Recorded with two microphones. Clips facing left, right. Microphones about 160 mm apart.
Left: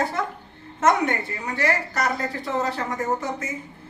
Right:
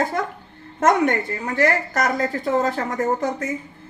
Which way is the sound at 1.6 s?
45° right (ahead or behind).